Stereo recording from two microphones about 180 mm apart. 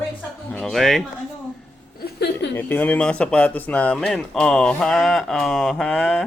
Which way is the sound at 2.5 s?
10° left (ahead or behind).